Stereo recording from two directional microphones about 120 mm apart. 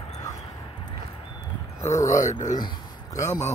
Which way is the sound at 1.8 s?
25° left (ahead or behind).